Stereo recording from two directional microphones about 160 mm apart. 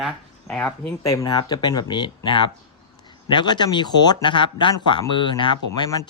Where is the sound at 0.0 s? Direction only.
5° left (ahead or behind).